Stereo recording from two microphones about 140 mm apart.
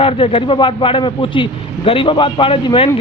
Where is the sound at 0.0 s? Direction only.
40° left (ahead or behind).